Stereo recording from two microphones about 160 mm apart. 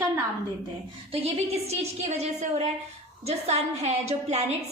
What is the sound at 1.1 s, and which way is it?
A woman's voice, 40° right (ahead or behind).